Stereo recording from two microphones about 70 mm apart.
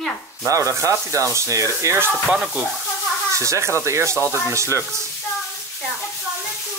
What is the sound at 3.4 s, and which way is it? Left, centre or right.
Rub, right.